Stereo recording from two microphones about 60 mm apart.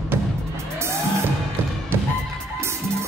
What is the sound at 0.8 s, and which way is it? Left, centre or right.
Music, right.